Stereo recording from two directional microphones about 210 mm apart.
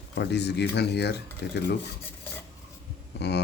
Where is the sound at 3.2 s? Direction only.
55° left (ahead or behind).